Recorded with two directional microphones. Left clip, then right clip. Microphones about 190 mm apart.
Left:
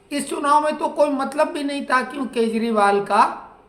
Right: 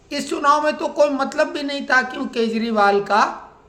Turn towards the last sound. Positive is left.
turn(degrees=-20)  # may be behind; listen again after turning